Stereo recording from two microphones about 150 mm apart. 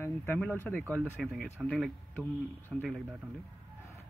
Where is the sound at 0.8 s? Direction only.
15° right (ahead or behind).